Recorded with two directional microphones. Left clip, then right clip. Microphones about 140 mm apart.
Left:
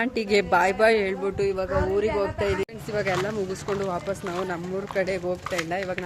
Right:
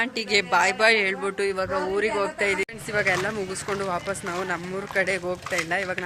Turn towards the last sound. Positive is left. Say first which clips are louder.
# right 2 dB
turn(degrees=0)  # may be behind; listen again after turning